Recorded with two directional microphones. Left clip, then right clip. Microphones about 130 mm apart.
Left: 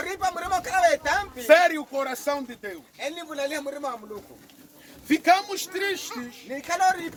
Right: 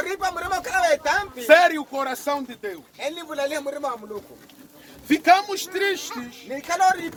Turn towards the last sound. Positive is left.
turn(degrees=15)  # may be behind; listen again after turning